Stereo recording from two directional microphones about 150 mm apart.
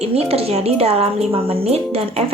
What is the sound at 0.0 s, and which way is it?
A woman's voice, 40° right (ahead or behind).